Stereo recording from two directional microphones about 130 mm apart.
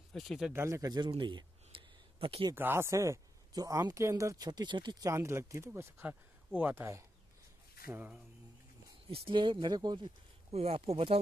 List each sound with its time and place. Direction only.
0.1 s speech: centre (ahead or behind)
0.5 s speech: 20° right (ahead or behind)
1.1 s a sound: 40° right (ahead or behind)
2.5 s speech: 15° right (ahead or behind)
9.1 s speech: 40° right (ahead or behind)
10.5 s speech: 50° right (ahead or behind)